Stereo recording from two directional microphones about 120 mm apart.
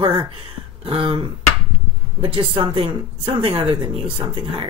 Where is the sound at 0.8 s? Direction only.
50° right (ahead or behind).